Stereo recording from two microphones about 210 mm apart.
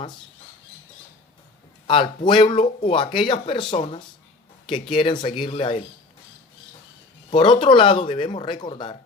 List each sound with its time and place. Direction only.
1.9 s speech: 25° left (ahead or behind)
7.3 s speech: 25° left (ahead or behind)